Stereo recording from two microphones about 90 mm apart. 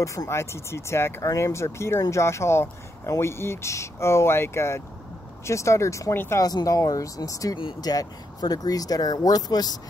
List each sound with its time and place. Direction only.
0.0 s speech: 35° left (ahead or behind)
6.4 s speech: 40° left (ahead or behind)